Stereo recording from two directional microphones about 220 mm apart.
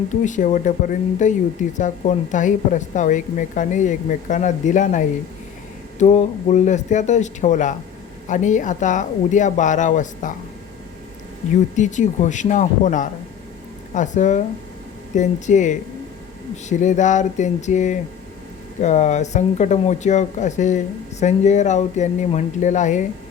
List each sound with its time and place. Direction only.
0.1 s speech: 35° left (ahead or behind)
11.8 s speech: 35° left (ahead or behind)